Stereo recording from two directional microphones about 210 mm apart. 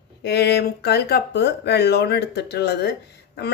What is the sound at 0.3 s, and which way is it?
Speech, 50° left (ahead or behind).